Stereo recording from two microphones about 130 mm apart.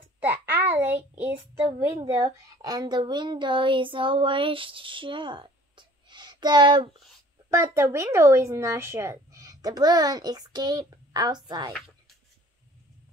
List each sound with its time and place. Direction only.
0.2 s a sound: 15° right (ahead or behind)
2.0 s speech: 25° right (ahead or behind)
7.5 s speech: 20° right (ahead or behind)